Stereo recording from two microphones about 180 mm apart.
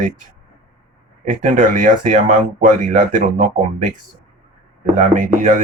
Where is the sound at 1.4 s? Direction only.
45° right (ahead or behind).